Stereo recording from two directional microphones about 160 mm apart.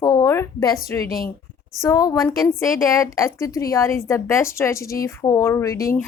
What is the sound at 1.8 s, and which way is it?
Speech, 20° left (ahead or behind).